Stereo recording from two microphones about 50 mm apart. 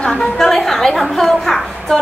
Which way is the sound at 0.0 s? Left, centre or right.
Centre.